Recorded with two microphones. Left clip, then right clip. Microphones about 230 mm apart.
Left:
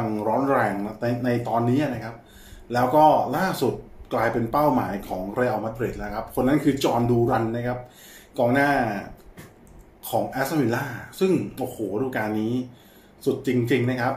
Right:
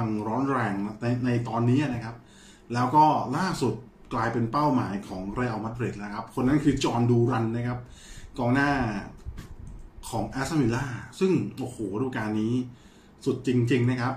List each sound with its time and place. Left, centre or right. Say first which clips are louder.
0.2 s speech: left 7 dB; centre
10.0 s speech: left 7 dB; centre